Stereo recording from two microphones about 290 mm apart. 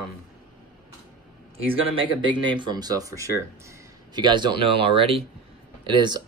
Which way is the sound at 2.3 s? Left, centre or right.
Centre.